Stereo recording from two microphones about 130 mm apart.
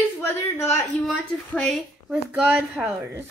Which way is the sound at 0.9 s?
Centre (ahead or behind).